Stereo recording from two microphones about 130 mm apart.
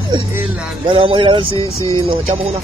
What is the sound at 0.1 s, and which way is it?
Music, 40° right (ahead or behind).